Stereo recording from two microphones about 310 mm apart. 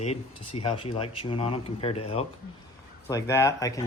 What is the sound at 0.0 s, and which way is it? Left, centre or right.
Speech, centre.